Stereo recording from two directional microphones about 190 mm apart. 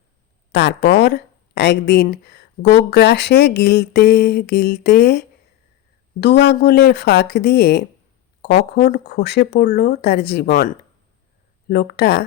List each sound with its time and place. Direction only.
0.5 s speech: 60° left (ahead or behind)